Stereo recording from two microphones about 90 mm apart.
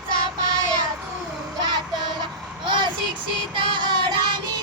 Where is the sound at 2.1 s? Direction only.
60° right (ahead or behind).